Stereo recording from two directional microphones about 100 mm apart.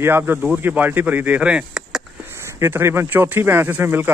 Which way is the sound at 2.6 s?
25° right (ahead or behind).